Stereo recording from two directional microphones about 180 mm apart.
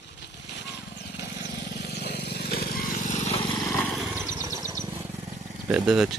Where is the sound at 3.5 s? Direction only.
15° left (ahead or behind).